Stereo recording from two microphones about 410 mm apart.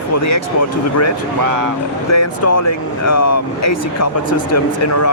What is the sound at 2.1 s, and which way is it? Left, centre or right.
Speech, left.